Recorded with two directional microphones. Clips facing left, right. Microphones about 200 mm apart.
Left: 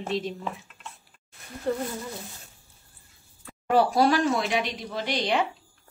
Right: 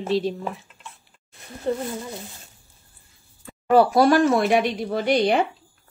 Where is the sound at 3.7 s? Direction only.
50° right (ahead or behind).